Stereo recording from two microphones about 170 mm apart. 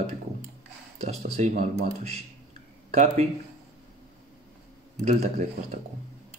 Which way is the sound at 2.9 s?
40° right (ahead or behind).